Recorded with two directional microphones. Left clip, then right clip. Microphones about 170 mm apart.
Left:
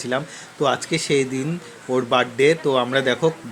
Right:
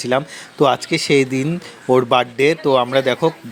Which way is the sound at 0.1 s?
45° right (ahead or behind).